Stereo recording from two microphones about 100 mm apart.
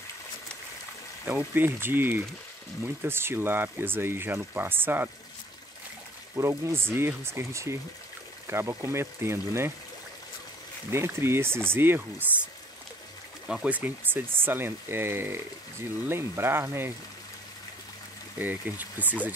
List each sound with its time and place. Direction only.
1.2 s speech: 20° right (ahead or behind)
6.6 s speech: 25° right (ahead or behind)
10.9 s speech: 25° right (ahead or behind)
13.5 s speech: 10° right (ahead or behind)
18.4 s speech: 15° right (ahead or behind)